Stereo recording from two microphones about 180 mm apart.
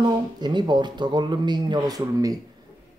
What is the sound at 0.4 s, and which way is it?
Speech, 25° right (ahead or behind).